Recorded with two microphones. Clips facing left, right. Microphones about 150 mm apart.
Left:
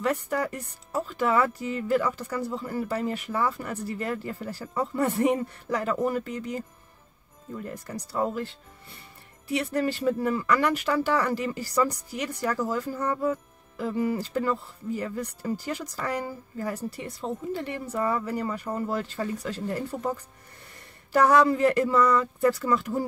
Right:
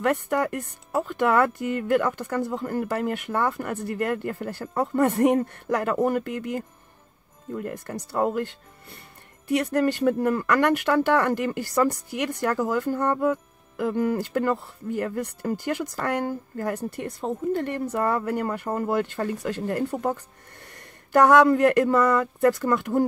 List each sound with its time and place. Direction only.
0.0 s speech: 55° right (ahead or behind)
8.1 s speech: 55° right (ahead or behind)
9.5 s speech: 45° right (ahead or behind)
19.7 s speech: 50° right (ahead or behind)
21.1 s speech: 50° right (ahead or behind)